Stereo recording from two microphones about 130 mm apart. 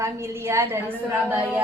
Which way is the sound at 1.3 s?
20° right (ahead or behind).